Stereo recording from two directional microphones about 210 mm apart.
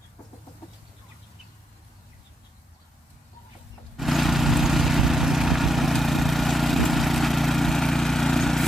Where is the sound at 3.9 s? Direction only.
Centre (ahead or behind).